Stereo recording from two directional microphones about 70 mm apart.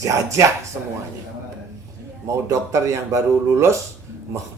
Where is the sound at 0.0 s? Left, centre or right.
Right.